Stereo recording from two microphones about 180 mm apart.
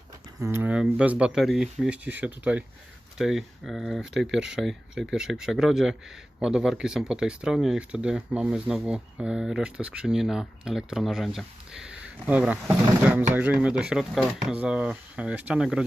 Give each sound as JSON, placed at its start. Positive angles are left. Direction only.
{"t": 0.3, "sound": "speech", "side_deg": -15}